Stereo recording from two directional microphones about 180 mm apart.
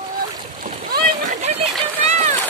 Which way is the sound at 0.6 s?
55° right (ahead or behind).